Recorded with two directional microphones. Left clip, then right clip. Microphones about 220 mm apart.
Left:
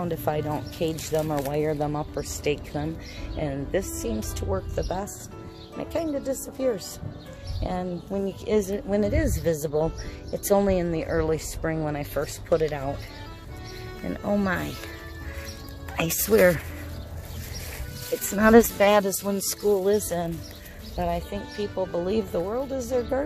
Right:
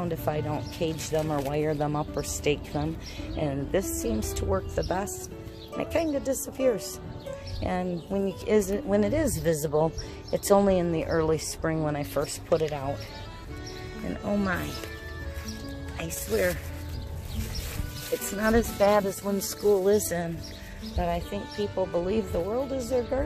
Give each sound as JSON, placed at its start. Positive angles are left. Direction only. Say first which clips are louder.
{"t": 0.0, "sound": "a woman's voice", "louder": "left 3 dB", "side_deg": 20}
{"t": 12.4, "sound": "speech", "louder": "left 4 dB", "side_deg": 15}
{"t": 14.0, "sound": "speech", "louder": "left 3 dB", "side_deg": 20}
{"t": 16.0, "sound": "speech", "louder": "left 8 dB", "side_deg": 55}
{"t": 18.3, "sound": "speech", "louder": "left 9 dB", "side_deg": 50}
{"t": 19.2, "sound": "speech", "louder": "left 2 dB", "side_deg": 25}
{"t": 19.6, "sound": "a woman's voice", "louder": "even", "side_deg": 5}
{"t": 21.0, "sound": "speech", "louder": "left 1 dB", "side_deg": 15}